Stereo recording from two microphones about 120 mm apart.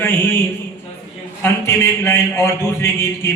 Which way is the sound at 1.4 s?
20° left (ahead or behind).